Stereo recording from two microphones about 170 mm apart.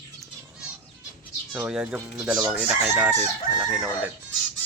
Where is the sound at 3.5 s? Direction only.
50° left (ahead or behind).